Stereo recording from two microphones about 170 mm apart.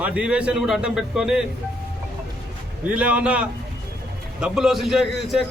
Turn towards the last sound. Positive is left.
turn(degrees=0)  # may be behind; listen again after turning